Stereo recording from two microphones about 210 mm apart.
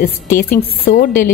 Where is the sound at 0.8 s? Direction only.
40° left (ahead or behind).